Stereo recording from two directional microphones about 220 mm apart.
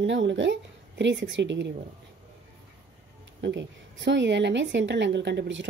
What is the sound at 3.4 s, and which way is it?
A woman's voice, 55° right (ahead or behind).